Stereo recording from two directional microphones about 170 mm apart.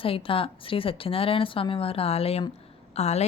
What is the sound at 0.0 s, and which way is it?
A woman's voice, 30° left (ahead or behind).